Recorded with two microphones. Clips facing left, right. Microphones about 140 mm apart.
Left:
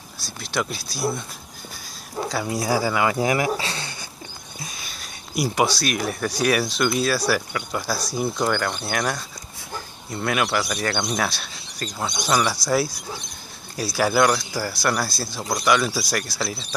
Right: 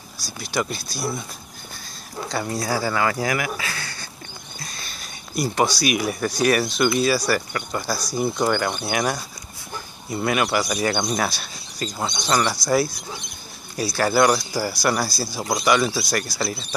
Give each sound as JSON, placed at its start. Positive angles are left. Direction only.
{"t": 0.4, "sound": "speech", "side_deg": 0}
{"t": 2.2, "sound": "speech", "side_deg": 5}
{"t": 4.6, "sound": "a sound", "side_deg": 10}
{"t": 5.8, "sound": "speech", "side_deg": -5}
{"t": 8.5, "sound": "speech", "side_deg": -10}